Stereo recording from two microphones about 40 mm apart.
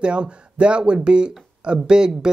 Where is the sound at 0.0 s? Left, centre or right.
Right.